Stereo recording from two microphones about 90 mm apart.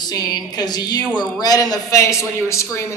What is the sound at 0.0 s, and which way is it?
A woman's voice, 50° left (ahead or behind).